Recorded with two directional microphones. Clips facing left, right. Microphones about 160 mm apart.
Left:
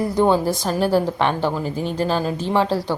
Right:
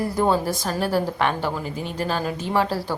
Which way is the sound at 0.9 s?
Centre (ahead or behind).